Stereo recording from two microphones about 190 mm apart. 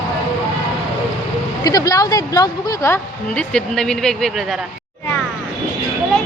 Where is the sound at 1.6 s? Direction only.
20° left (ahead or behind); by 4.4 s centre (ahead or behind).